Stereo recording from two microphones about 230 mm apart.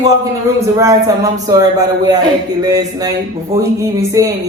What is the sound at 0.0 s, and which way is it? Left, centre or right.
Speech, centre.